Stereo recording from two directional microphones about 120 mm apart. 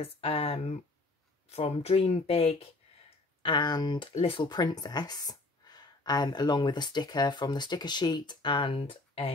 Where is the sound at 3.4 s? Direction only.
40° left (ahead or behind).